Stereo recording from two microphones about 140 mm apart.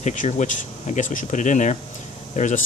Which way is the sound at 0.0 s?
60° left (ahead or behind).